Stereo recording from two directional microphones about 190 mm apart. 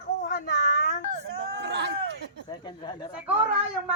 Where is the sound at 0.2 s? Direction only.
65° left (ahead or behind).